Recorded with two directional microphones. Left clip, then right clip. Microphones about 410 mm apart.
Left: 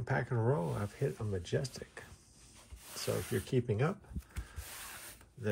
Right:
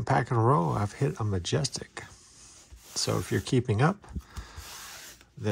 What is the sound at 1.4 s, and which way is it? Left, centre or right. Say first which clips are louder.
Speech: right 8 dB; centre.